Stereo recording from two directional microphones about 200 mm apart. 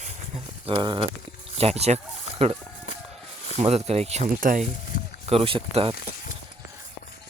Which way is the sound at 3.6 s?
30° right (ahead or behind).